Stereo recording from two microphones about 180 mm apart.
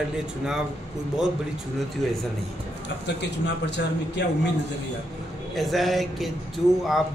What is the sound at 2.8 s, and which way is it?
Speech, 75° left (ahead or behind).